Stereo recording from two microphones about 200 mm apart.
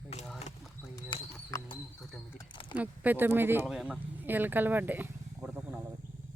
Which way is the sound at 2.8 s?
10° right (ahead or behind).